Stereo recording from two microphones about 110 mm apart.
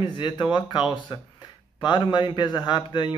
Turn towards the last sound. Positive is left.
turn(degrees=45)  # may be behind; listen again after turning